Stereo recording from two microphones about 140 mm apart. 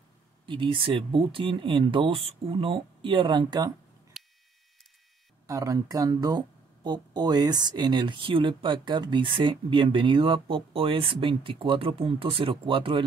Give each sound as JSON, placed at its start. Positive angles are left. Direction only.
{"t": 0.5, "sound": "speech", "side_deg": -40}
{"t": 4.1, "sound": "buzzer", "side_deg": 0}
{"t": 5.5, "sound": "speech", "side_deg": -25}